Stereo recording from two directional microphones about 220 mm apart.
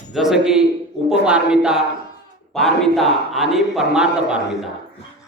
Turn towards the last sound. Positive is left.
turn(degrees=-5)  # may be behind; listen again after turning